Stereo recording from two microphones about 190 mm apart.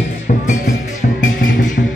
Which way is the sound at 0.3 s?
45° left (ahead or behind).